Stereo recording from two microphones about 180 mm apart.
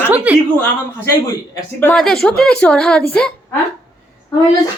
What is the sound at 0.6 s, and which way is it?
A man's voice, 15° left (ahead or behind).